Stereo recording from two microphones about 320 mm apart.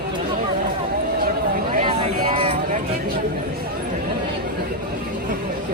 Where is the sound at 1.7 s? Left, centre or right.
Centre.